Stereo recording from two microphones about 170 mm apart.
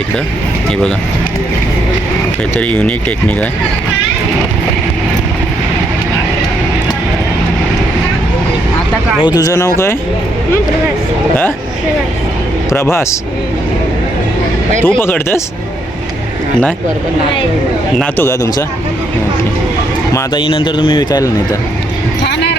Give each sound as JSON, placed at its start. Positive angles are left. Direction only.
{"t": 2.6, "sound": "speech", "side_deg": 10}
{"t": 9.2, "sound": "speech", "side_deg": 20}
{"t": 12.7, "sound": "speech", "side_deg": 15}
{"t": 14.8, "sound": "speech", "side_deg": 10}
{"t": 18.0, "sound": "speech", "side_deg": 15}
{"t": 20.1, "sound": "speech", "side_deg": 30}
{"t": 22.2, "sound": "a sound", "side_deg": 90}